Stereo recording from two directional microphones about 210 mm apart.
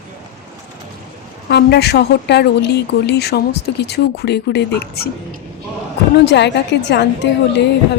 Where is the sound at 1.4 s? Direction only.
50° left (ahead or behind).